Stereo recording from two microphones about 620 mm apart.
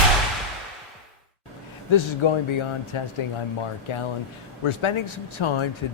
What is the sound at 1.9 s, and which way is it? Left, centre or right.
Speech, left.